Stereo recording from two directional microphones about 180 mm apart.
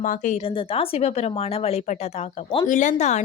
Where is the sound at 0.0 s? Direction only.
45° left (ahead or behind).